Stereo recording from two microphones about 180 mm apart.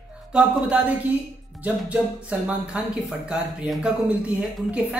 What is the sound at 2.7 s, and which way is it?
Speech, 5° right (ahead or behind).